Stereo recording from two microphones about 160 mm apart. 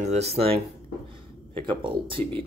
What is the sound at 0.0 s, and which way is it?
Speech, 45° right (ahead or behind).